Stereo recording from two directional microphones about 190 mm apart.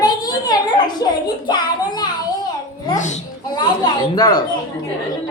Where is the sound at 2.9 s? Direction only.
40° left (ahead or behind).